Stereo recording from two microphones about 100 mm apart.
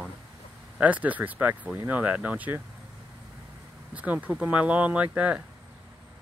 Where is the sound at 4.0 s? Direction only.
15° right (ahead or behind).